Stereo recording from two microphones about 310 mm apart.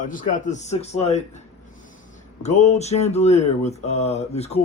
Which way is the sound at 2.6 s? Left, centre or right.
Left.